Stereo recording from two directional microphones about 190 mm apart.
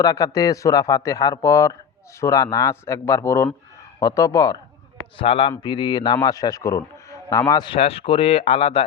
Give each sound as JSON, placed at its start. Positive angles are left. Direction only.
{"t": 0.0, "sound": "a man's voice", "side_deg": 20}
{"t": 5.1, "sound": "speech", "side_deg": 30}